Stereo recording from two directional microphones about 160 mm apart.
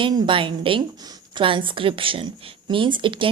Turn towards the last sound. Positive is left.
turn(degrees=-30)  # may be behind; listen again after turning